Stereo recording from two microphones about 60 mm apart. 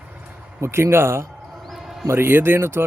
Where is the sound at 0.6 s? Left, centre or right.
Right.